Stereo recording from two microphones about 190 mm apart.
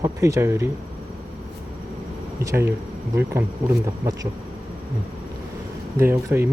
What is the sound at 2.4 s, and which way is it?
Speech, 15° right (ahead or behind).